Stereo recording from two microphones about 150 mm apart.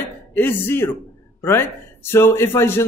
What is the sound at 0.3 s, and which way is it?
A man's voice, 15° left (ahead or behind).